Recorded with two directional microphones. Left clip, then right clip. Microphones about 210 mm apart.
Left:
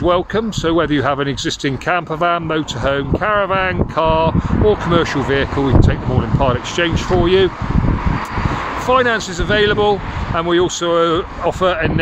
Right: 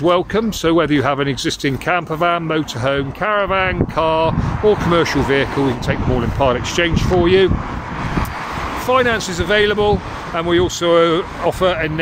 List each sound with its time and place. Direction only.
0.0 s speech: 5° left (ahead or behind)
8.8 s speech: centre (ahead or behind)